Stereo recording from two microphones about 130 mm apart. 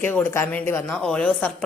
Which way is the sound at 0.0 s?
15° left (ahead or behind).